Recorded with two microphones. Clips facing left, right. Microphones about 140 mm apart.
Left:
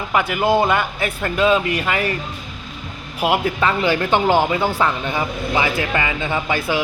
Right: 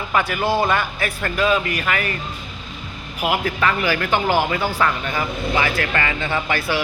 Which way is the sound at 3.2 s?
25° left (ahead or behind).